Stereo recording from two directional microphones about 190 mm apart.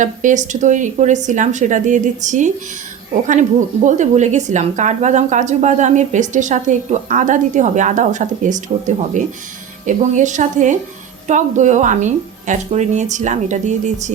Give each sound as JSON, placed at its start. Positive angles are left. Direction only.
{"t": 0.0, "sound": "a woman's voice", "side_deg": -40}